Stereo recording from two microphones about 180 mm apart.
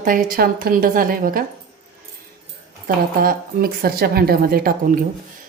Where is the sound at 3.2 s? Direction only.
55° right (ahead or behind).